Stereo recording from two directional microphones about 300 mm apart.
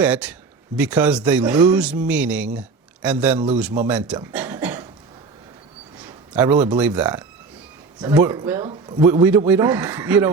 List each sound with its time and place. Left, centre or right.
0.0 s speech: centre
3.8 s a sound: centre
6.0 s a man's voice: centre